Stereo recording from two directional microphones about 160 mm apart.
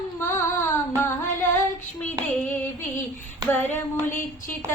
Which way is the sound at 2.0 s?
10° left (ahead or behind).